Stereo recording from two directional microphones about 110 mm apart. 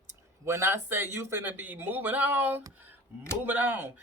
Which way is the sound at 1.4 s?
15° right (ahead or behind).